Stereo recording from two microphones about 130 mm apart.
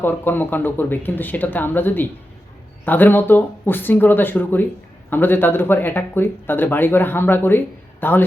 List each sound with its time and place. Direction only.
0.0 s speech: 15° left (ahead or behind)